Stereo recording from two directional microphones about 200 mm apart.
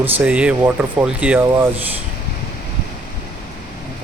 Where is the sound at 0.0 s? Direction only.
5° right (ahead or behind).